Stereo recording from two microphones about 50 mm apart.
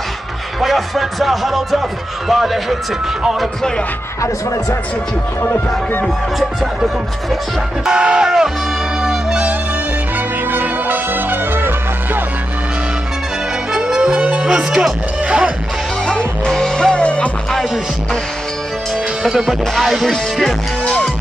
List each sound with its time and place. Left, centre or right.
0.6 s speech: centre
5.4 s speech: left
6.6 s music: centre
7.8 s speech: centre
9.0 s music: centre
10.5 s music: right
13.7 s music: centre
16.1 s music: centre
19.3 s speech: centre